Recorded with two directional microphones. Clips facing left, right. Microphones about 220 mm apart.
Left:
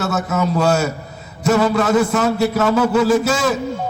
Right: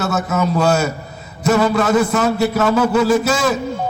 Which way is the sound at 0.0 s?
35° left (ahead or behind).